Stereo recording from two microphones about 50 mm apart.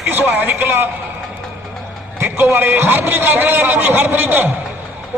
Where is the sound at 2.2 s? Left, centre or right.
Right.